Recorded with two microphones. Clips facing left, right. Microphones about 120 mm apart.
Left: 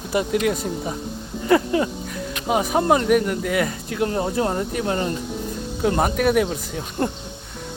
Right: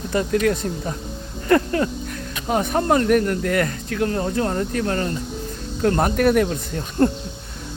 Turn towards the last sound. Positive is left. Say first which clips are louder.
# right 5 dB
turn(degrees=5)  # may be behind; listen again after turning